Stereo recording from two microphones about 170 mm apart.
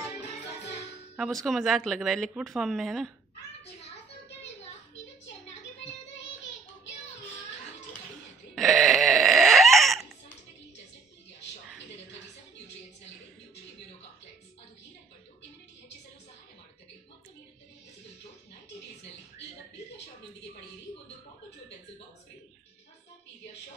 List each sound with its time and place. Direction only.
0.1 s music: 85° left
1.1 s speech: centre (ahead or behind)
8.5 s a sound: centre (ahead or behind)